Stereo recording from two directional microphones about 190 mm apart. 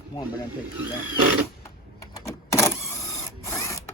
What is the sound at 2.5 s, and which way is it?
Printer, 15° left (ahead or behind).